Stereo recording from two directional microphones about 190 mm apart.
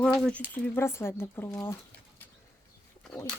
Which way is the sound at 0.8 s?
15° left (ahead or behind).